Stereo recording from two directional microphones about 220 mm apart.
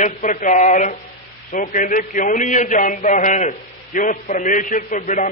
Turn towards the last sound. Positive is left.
turn(degrees=35)  # may be behind; listen again after turning